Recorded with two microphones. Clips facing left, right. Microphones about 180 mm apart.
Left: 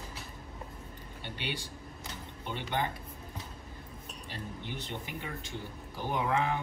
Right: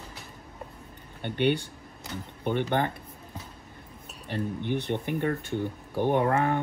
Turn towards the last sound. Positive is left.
turn(degrees=-50)  # may be behind; listen again after turning